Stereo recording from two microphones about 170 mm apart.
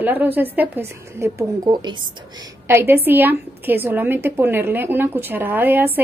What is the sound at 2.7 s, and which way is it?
Speech, 15° right (ahead or behind).